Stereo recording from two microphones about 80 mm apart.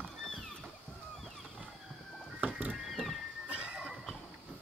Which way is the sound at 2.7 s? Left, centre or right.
Centre.